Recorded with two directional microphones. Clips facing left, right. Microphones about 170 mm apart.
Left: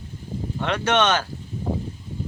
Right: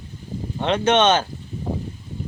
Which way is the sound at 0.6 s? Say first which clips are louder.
Right 4 dB; 20° right (ahead or behind).